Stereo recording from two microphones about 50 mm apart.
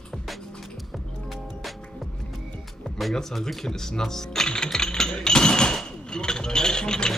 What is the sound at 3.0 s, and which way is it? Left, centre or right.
Speech, centre.